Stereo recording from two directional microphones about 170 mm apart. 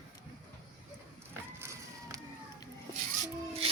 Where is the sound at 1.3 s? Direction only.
15° right (ahead or behind).